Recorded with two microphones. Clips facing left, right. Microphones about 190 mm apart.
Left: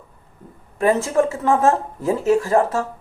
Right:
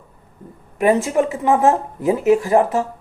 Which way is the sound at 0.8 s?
15° right (ahead or behind).